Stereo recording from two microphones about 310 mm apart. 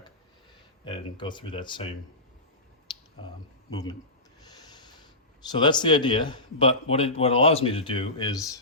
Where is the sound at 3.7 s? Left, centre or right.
Centre.